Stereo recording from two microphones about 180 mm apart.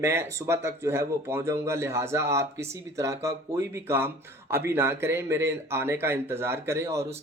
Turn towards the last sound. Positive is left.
turn(degrees=-15)  # may be behind; listen again after turning